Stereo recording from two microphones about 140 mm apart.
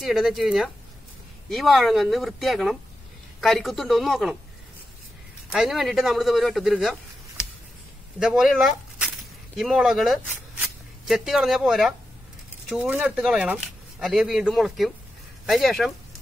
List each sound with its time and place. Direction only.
0.0 s speech: centre (ahead or behind)
5.5 s speech: centre (ahead or behind)